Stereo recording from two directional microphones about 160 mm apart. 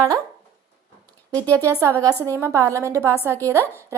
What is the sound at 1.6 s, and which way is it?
A woman's voice, 15° right (ahead or behind).